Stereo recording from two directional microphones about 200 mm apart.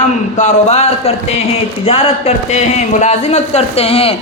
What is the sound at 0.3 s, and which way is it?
A man's voice, 35° left (ahead or behind).